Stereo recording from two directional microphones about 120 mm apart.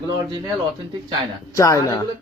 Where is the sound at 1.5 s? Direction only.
30° left (ahead or behind).